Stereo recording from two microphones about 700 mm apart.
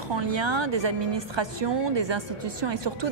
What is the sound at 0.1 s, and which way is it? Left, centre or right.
Speech, right.